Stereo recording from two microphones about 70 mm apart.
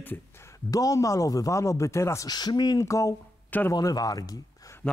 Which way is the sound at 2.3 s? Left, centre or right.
Left.